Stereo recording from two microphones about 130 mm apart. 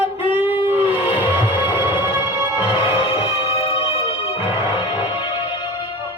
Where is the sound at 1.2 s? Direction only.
15° right (ahead or behind).